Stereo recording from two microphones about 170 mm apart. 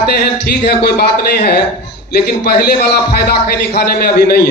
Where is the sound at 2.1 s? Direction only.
65° left (ahead or behind).